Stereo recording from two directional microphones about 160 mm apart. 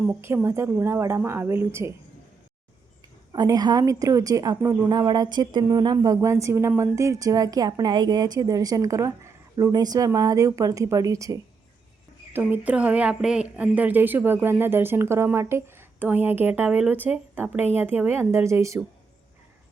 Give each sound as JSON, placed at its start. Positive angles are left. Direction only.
{"t": 0.0, "sound": "a woman's voice", "side_deg": -15}
{"t": 3.3, "sound": "a woman's voice", "side_deg": -25}